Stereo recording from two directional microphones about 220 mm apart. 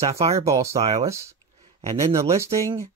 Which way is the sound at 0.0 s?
30° right (ahead or behind).